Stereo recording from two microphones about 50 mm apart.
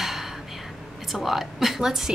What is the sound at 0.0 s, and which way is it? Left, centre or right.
Whispering, centre.